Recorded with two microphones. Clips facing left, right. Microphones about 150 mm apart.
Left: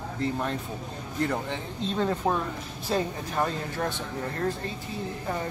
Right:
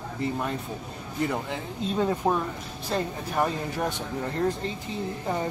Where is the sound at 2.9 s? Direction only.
5° left (ahead or behind).